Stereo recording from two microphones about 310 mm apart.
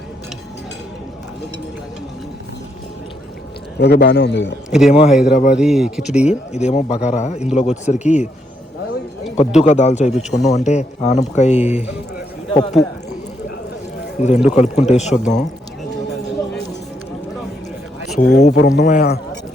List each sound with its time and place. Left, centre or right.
3.8 s a man's voice: left
4.7 s speech: centre
5.3 s a man's voice: left
5.5 s speech: centre
6.5 s a man's voice: left
9.6 s a man's voice: left
14.2 s a man's voice: left
18.2 s a man's voice: left